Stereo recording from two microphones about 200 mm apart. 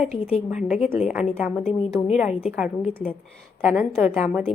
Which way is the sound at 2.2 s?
5° right (ahead or behind).